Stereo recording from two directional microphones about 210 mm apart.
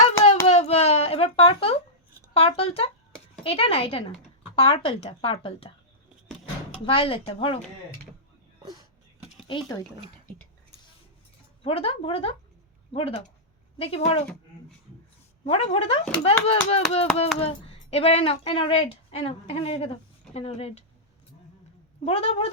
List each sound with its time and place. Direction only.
0.0 s a sound: 30° left (ahead or behind)
2.3 s speech: 25° left (ahead or behind)
6.8 s speech: 25° left (ahead or behind)
8.6 s a sound: 20° right (ahead or behind)
9.5 s speech: 20° left (ahead or behind)
11.6 s speech: 25° left (ahead or behind)
15.4 s speech: 30° left (ahead or behind)
22.0 s speech: 30° left (ahead or behind)